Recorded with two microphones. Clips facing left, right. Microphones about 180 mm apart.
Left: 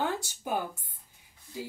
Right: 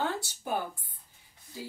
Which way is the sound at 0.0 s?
15° left (ahead or behind).